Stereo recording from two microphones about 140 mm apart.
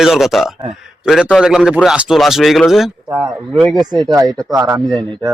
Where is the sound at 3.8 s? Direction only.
30° right (ahead or behind).